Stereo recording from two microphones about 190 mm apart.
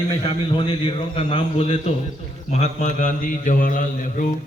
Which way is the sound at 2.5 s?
40° left (ahead or behind).